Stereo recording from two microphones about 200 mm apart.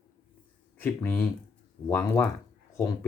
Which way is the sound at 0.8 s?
10° left (ahead or behind).